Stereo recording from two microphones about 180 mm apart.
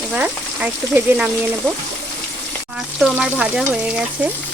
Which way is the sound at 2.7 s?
5° right (ahead or behind).